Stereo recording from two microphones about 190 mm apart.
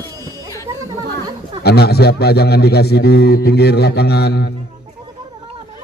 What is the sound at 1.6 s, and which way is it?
A man's voice, 55° left (ahead or behind).